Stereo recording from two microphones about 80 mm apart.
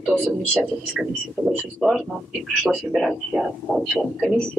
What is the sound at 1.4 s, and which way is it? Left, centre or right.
Speech, centre.